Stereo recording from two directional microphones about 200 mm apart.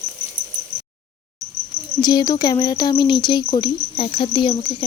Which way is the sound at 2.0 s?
20° left (ahead or behind).